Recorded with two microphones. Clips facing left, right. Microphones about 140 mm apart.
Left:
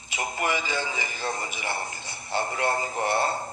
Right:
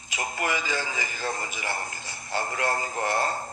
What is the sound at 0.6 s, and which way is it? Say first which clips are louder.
Speech: even; 40° right (ahead or behind).